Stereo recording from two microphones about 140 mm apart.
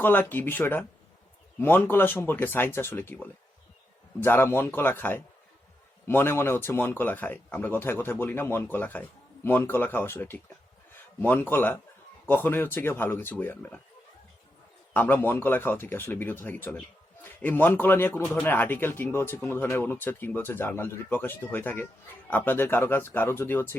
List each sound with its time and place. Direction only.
0.0 s a man's voice: 15° left (ahead or behind)
4.2 s a man's voice: 15° left (ahead or behind)
14.9 s a man's voice: 15° left (ahead or behind)